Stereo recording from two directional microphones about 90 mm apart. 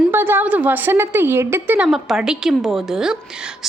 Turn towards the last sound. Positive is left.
turn(degrees=-10)  # may be behind; listen again after turning